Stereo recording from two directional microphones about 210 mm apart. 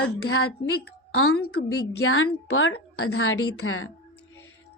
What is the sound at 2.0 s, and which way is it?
A woman's voice, 75° left (ahead or behind).